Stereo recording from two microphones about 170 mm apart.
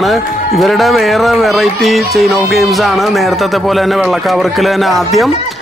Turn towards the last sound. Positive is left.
turn(degrees=0)  # may be behind; listen again after turning